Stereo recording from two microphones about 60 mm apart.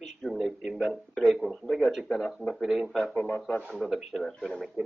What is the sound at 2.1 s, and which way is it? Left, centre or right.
Speech, centre.